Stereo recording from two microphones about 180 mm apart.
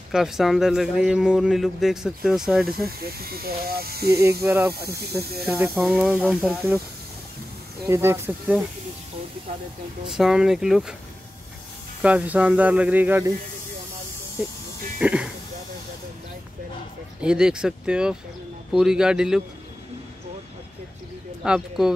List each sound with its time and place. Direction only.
0.1 s speech: 5° right (ahead or behind)
3.0 s speech: 60° right (ahead or behind)
4.4 s speech: 10° right (ahead or behind)
7.8 s speech: 15° right (ahead or behind)
10.0 s speech: 5° right (ahead or behind)
12.0 s speech: 10° right (ahead or behind)
15.0 s speech: 5° right (ahead or behind)
17.2 s speech: 5° right (ahead or behind)
21.5 s speech: 5° right (ahead or behind)